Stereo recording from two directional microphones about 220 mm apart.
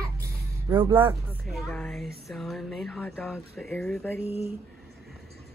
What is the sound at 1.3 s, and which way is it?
Speech, centre (ahead or behind).